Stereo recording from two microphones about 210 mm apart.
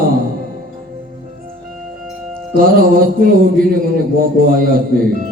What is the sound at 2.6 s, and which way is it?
Mantra, 45° right (ahead or behind).